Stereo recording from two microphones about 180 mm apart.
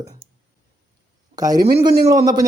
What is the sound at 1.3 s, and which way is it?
Speech, 20° right (ahead or behind).